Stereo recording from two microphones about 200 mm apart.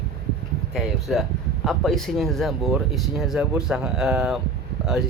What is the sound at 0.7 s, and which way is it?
Speech, centre (ahead or behind).